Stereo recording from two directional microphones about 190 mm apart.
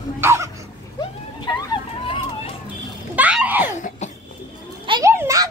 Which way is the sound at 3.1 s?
5° right (ahead or behind).